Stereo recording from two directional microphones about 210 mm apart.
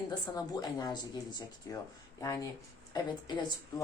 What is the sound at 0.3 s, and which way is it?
Speech, 20° left (ahead or behind).